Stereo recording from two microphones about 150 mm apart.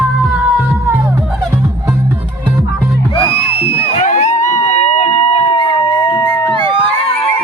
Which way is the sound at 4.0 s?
55° left (ahead or behind).